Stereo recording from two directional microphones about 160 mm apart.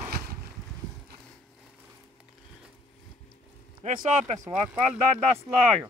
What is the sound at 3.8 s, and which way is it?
Speech, 50° right (ahead or behind).